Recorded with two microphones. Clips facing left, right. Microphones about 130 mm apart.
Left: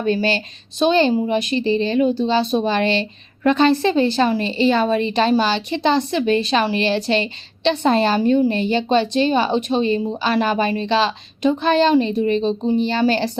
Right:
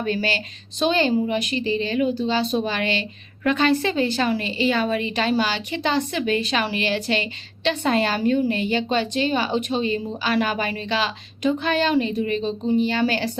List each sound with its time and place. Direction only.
0.0 s a woman's voice: 25° left (ahead or behind)